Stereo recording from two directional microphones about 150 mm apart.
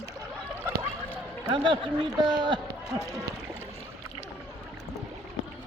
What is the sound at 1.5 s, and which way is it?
A man's voice, 35° right (ahead or behind).